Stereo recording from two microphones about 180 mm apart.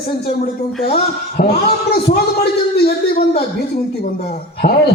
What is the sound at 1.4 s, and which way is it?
Speech, 60° left (ahead or behind).